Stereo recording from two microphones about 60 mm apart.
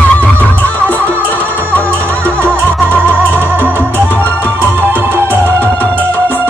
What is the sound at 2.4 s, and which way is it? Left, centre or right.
Music, right.